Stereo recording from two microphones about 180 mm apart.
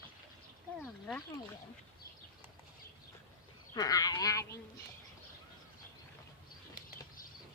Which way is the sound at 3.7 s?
20° left (ahead or behind).